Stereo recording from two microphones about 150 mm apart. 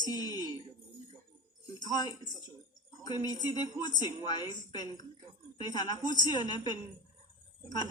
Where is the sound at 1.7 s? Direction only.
25° left (ahead or behind).